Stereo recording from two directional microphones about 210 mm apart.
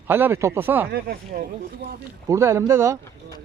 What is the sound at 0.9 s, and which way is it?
Speech, 45° right (ahead or behind).